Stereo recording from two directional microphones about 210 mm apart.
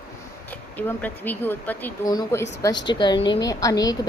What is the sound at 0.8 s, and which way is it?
Speech, 10° left (ahead or behind).